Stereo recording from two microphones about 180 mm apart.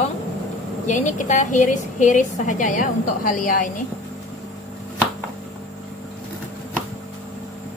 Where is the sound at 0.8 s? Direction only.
45° left (ahead or behind).